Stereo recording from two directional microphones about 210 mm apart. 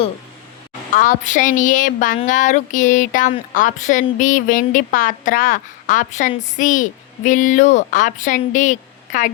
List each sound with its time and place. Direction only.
0.9 s a woman's voice: 35° left (ahead or behind)